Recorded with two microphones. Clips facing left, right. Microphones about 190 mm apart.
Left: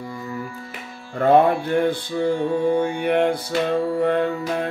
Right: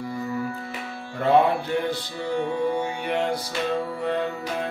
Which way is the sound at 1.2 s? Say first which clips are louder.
Left 4 dB; 50° left (ahead or behind).